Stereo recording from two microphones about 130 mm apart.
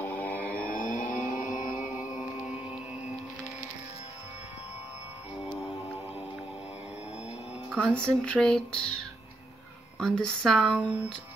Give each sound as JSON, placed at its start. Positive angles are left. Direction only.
{"t": 0.0, "sound": "mantra", "side_deg": 15}
{"t": 0.7, "sound": "vehicle", "side_deg": 90}
{"t": 1.5, "sound": "music", "side_deg": -5}
{"t": 7.9, "sound": "speech", "side_deg": 5}